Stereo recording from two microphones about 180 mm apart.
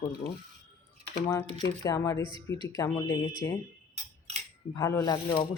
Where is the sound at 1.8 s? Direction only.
15° left (ahead or behind).